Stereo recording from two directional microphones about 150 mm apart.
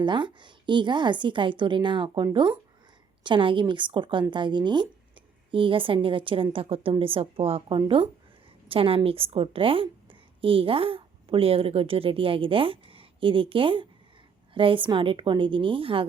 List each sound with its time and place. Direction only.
0.0 s a woman's voice: 30° right (ahead or behind)